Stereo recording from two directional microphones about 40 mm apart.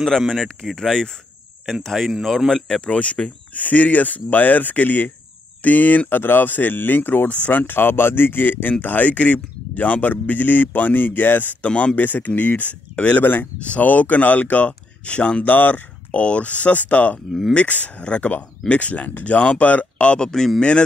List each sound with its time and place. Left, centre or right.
0.3 s speech: centre
1.8 s speech: centre
2.8 s speech: left
5.6 s speech: left
11.6 s speech: left
11.9 s speech: left
13.2 s speech: left
13.7 s speech: left
15.4 s speech: left
16.1 s speech: left
17.3 s speech: centre
17.6 s speech: left
18.0 s speech: left
20.2 s speech: centre